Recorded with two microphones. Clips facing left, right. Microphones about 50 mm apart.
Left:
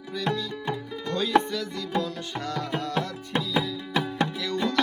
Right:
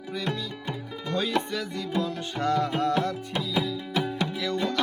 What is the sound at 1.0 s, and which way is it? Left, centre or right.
Music, centre.